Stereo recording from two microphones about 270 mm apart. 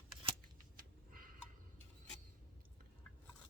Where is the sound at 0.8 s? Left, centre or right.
Right.